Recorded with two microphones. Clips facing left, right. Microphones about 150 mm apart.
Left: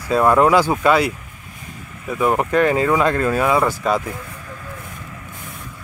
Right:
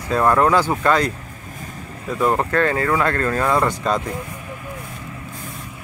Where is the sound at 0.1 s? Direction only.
15° left (ahead or behind).